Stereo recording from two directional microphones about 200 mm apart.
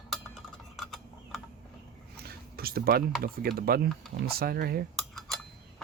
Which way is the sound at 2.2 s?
50° right (ahead or behind).